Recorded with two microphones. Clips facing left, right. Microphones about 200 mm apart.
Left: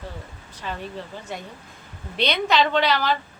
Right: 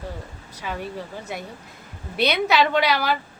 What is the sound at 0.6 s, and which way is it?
Speech, 10° right (ahead or behind).